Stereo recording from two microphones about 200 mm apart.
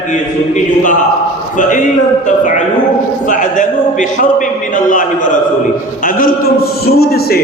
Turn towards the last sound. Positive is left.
turn(degrees=50)  # may be behind; listen again after turning